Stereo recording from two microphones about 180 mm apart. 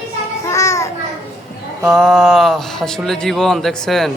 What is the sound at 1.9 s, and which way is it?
Speech, centre (ahead or behind).